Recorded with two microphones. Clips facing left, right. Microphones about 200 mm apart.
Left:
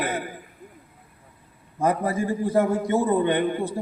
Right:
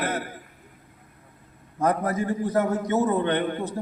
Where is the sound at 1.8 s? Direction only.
10° left (ahead or behind).